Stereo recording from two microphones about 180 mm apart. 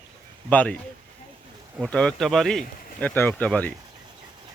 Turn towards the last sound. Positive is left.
turn(degrees=10)  # may be behind; listen again after turning